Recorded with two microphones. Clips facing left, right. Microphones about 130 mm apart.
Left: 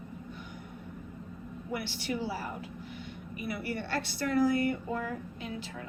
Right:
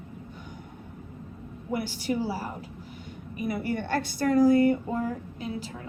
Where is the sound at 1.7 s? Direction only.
45° right (ahead or behind).